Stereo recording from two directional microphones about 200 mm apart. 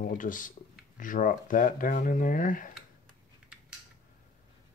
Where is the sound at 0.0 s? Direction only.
40° left (ahead or behind).